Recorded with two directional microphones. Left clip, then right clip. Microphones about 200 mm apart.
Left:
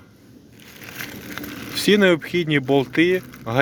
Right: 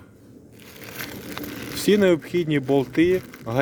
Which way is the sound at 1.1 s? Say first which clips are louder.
Left 1 dB; 45° right (ahead or behind).